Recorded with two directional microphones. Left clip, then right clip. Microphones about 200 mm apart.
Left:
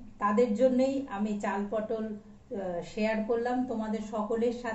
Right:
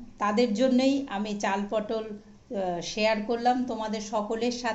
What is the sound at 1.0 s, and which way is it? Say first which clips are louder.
A woman's voice: right 4 dB; 50° right (ahead or behind).